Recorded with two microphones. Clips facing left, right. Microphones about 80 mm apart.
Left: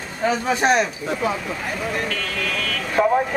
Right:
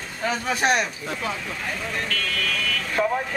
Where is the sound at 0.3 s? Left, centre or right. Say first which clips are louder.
Left 3 dB; centre.